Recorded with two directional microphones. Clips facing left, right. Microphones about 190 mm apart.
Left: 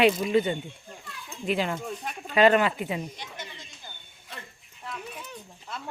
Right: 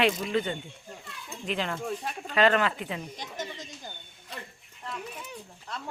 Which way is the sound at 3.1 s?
40° right (ahead or behind).